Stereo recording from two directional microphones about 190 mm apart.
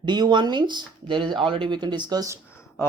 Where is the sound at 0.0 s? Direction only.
25° right (ahead or behind).